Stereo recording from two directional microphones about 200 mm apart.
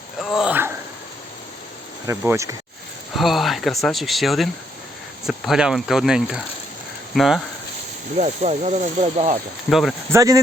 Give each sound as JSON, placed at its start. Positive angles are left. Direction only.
{"t": 0.2, "sound": "a sound", "side_deg": 0}
{"t": 2.0, "sound": "speech", "side_deg": -15}
{"t": 3.2, "sound": "speech", "side_deg": 0}
{"t": 8.2, "sound": "speech", "side_deg": -35}
{"t": 9.6, "sound": "speech", "side_deg": 0}
{"t": 10.1, "sound": "speech", "side_deg": -15}